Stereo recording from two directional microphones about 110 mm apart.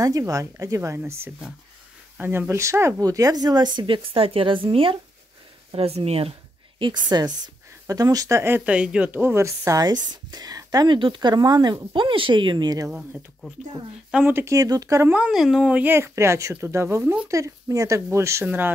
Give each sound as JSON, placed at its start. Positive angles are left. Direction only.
{"t": 0.0, "sound": "speech", "side_deg": -30}
{"t": 2.1, "sound": "speech", "side_deg": -20}
{"t": 5.7, "sound": "speech", "side_deg": -65}
{"t": 6.8, "sound": "speech", "side_deg": -40}
{"t": 14.1, "sound": "speech", "side_deg": -20}
{"t": 15.1, "sound": "speech", "side_deg": -5}